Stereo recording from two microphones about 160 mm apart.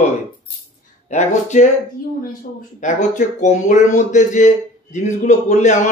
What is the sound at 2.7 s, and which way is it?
Speech, 50° left (ahead or behind).